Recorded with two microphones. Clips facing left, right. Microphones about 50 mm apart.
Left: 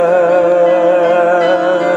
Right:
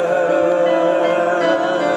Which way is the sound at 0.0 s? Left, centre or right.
Left.